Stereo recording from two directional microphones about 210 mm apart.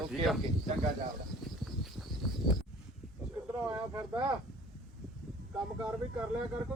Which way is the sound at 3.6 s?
10° right (ahead or behind).